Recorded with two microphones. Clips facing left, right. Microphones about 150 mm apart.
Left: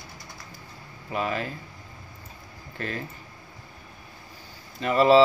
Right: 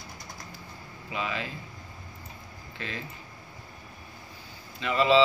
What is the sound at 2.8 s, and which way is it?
Speech, 50° left (ahead or behind).